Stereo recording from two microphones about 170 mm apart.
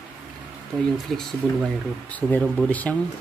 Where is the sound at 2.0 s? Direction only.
10° left (ahead or behind).